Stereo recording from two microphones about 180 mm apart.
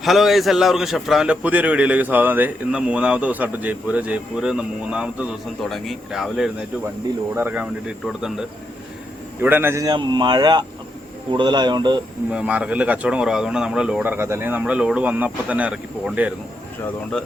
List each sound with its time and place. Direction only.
0.0 s a man's voice: centre (ahead or behind); by 11.9 s 25° right (ahead or behind)
12.3 s speech: 5° right (ahead or behind)